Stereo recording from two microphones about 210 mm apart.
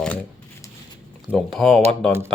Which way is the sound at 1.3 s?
Centre (ahead or behind).